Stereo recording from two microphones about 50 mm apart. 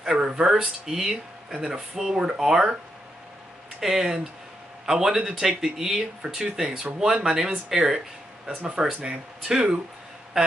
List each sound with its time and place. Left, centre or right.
0.0 s speech: centre
3.8 s speech: centre